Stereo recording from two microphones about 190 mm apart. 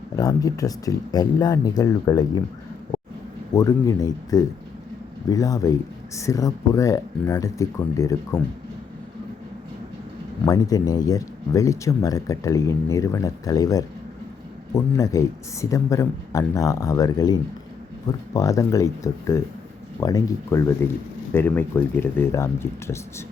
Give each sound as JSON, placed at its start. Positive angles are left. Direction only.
{"t": 0.2, "sound": "speech", "side_deg": 20}
{"t": 3.5, "sound": "speech", "side_deg": 20}
{"t": 10.4, "sound": "speech", "side_deg": 20}